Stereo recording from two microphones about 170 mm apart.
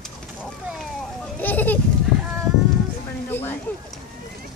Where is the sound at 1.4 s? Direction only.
10° left (ahead or behind).